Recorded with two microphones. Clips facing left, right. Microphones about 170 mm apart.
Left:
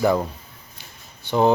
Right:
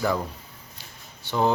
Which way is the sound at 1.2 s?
20° left (ahead or behind).